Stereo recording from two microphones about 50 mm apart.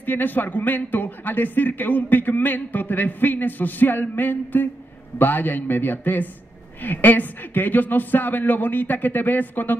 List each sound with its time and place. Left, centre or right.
0.0 s a man's voice: left